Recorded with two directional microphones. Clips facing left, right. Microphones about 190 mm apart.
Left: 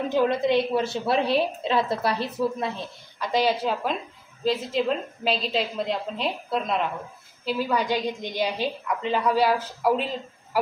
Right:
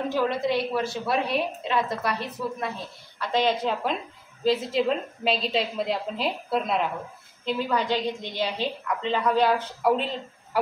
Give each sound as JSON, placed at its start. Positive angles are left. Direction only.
{"t": 0.1, "sound": "a woman's voice", "side_deg": 20}
{"t": 3.2, "sound": "a woman's voice", "side_deg": 10}
{"t": 7.4, "sound": "a woman's voice", "side_deg": 10}